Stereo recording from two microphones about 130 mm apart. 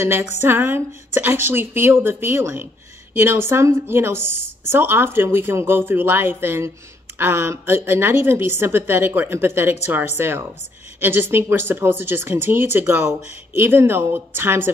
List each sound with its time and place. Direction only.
0.3 s a woman's voice: 20° right (ahead or behind)